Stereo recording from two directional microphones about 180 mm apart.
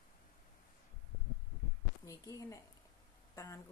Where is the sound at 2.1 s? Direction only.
20° left (ahead or behind).